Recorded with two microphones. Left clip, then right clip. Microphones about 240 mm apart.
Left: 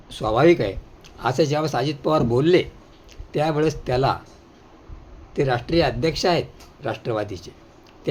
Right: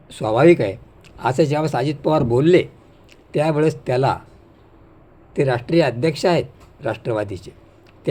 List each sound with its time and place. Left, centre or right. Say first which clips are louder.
0.1 s speech: right 3 dB; centre
5.3 s speech: right 3 dB; centre